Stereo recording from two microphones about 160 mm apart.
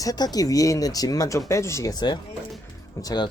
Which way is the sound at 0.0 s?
25° left (ahead or behind).